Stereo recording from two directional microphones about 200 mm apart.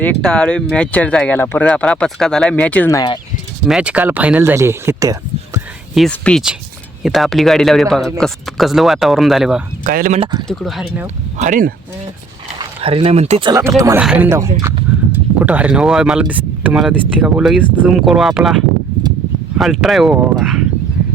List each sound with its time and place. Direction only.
0.0 s speech: 5° left (ahead or behind)
3.7 s speech: 5° right (ahead or behind)
5.5 s speech: centre (ahead or behind)
9.8 s speech: 45° right (ahead or behind)
10.5 s speech: centre (ahead or behind)
11.3 s speech: 40° right (ahead or behind)
12.5 s speech: 25° right (ahead or behind)
13.5 s speech: 15° right (ahead or behind)
19.5 s speech: centre (ahead or behind)